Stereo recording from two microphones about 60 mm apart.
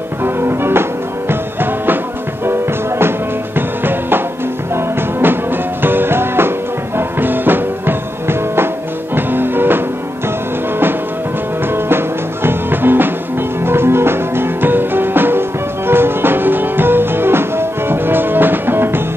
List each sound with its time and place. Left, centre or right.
0.2 s music: right
12.4 s music: right